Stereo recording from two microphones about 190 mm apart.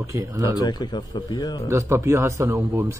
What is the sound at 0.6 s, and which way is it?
Speech, 20° left (ahead or behind).